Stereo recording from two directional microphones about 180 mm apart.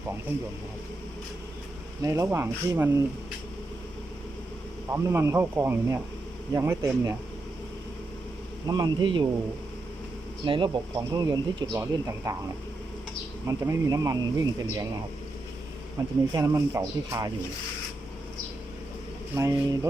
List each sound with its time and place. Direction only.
0.3 s speech: 10° right (ahead or behind)
2.0 s speech: 15° right (ahead or behind)
4.9 s speech: 15° right (ahead or behind)
8.6 s speech: 20° right (ahead or behind)
10.4 s speech: 25° right (ahead or behind)
13.5 s speech: 20° right (ahead or behind)
16.3 s speech: 15° right (ahead or behind)
19.4 s speech: 15° right (ahead or behind)